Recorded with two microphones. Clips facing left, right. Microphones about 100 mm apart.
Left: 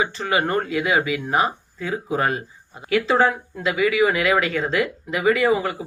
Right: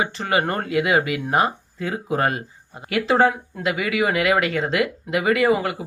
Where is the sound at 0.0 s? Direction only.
45° right (ahead or behind).